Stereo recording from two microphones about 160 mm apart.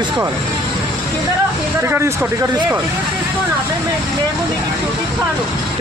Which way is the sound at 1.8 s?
15° right (ahead or behind).